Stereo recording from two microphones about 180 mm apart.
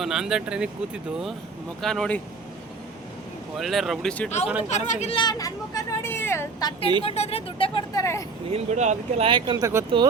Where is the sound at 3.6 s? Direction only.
Centre (ahead or behind).